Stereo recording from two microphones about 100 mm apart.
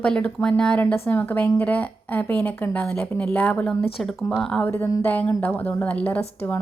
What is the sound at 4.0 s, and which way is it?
Speech, centre (ahead or behind).